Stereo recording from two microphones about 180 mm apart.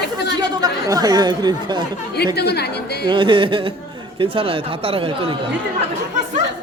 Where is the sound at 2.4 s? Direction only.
65° left (ahead or behind).